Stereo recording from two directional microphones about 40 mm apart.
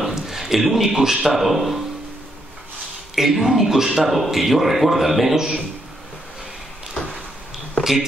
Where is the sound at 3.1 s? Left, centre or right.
Centre.